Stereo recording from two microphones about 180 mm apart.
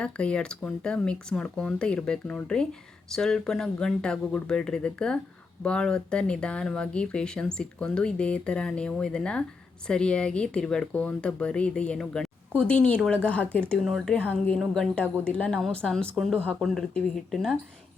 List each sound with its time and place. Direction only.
0.0 s a woman's voice: 5° left (ahead or behind)